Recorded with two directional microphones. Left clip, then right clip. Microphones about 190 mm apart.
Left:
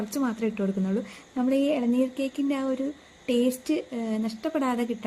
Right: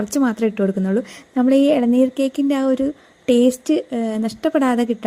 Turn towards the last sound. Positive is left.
turn(degrees=-35)  # may be behind; listen again after turning